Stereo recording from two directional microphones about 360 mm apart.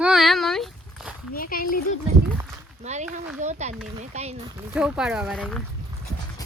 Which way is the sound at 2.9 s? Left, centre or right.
Centre.